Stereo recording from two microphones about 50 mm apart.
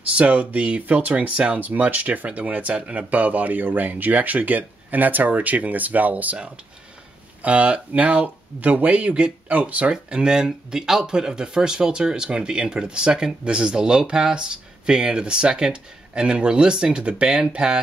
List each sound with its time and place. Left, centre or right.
0.1 s speech: right
6.3 s speech: right